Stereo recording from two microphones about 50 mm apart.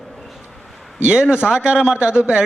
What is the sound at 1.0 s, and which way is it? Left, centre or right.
A man's voice, centre.